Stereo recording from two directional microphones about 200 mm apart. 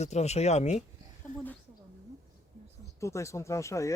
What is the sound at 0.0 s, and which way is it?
A woman's voice, 35° left (ahead or behind).